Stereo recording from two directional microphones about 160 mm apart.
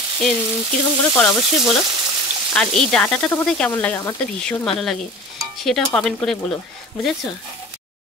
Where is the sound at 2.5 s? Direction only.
5° left (ahead or behind).